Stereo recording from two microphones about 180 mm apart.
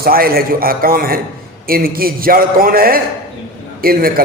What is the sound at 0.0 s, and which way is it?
A man's voice, 55° right (ahead or behind).